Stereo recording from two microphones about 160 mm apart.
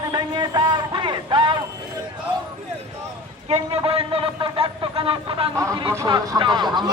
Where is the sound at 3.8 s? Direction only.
35° right (ahead or behind).